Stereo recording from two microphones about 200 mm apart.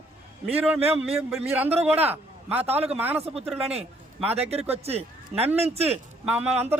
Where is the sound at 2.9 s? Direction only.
10° right (ahead or behind).